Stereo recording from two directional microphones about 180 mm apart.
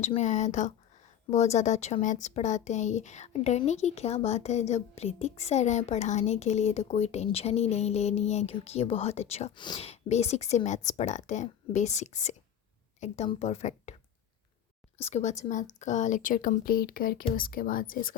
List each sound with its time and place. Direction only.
0.0 s speech: 40° left (ahead or behind)
15.0 s a woman's voice: 40° left (ahead or behind)